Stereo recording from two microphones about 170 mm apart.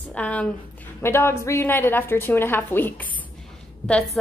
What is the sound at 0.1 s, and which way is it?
A woman's voice, 10° left (ahead or behind).